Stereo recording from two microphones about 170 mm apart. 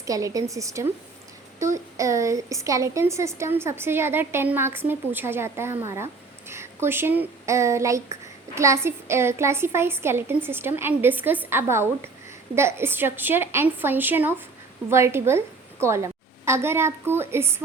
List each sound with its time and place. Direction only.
0.0 s a woman's voice: 20° right (ahead or behind)